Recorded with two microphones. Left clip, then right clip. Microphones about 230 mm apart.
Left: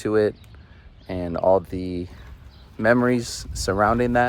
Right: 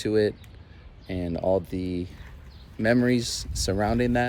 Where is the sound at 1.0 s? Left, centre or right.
Centre.